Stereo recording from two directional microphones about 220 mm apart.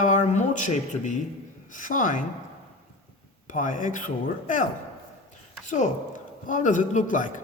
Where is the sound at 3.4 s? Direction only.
35° left (ahead or behind).